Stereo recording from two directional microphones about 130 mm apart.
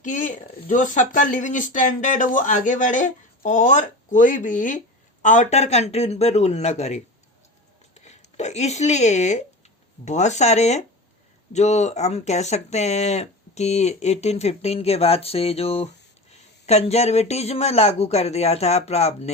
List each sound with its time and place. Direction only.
0.0 s speech: 75° left (ahead or behind); by 19.3 s 55° left (ahead or behind)